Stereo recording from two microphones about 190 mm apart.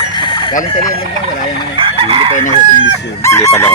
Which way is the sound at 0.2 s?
25° left (ahead or behind).